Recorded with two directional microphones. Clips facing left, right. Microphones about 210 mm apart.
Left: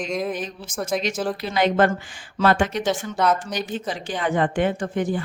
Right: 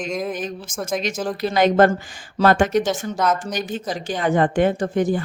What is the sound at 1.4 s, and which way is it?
Speech, 40° right (ahead or behind).